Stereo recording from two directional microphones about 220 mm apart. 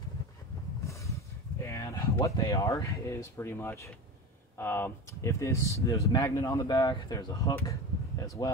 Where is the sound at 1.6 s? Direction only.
15° left (ahead or behind).